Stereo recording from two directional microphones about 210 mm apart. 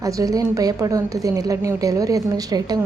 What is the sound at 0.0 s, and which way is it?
A woman's voice, 15° right (ahead or behind).